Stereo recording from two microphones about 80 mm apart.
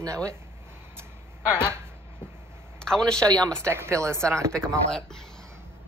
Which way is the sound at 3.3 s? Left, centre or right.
Right.